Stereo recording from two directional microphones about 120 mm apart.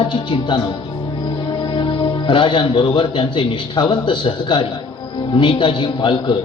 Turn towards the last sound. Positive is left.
turn(degrees=45)  # may be behind; listen again after turning